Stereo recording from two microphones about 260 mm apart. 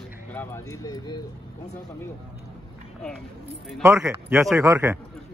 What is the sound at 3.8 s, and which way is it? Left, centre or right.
Speech, centre.